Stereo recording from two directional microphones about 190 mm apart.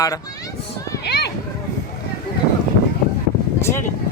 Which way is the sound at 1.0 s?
60° left (ahead or behind).